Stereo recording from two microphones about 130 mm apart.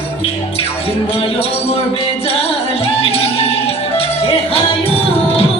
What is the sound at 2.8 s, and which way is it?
Music, 50° left (ahead or behind).